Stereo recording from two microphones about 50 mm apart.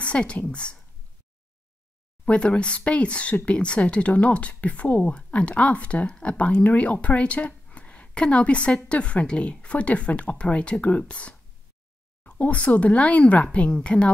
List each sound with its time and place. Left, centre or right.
0.0 s a woman's voice: left
2.2 s speech: left